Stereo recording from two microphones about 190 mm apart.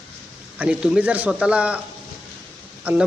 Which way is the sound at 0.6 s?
5° right (ahead or behind).